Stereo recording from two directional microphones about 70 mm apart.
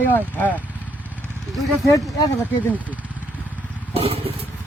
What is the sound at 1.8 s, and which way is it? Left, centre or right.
Speech, left.